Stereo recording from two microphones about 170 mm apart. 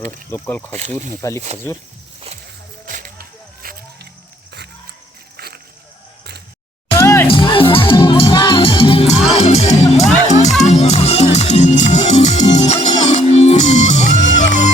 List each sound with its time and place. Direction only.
0.3 s speech: 10° left (ahead or behind)
0.7 s speech: 45° right (ahead or behind)
2.8 s music: 55° right (ahead or behind)
5.4 s a sound: 65° right (ahead or behind)
6.9 s music: 15° left (ahead or behind)
7.3 s music: 30° left (ahead or behind); by 14.7 s 45° left (ahead or behind)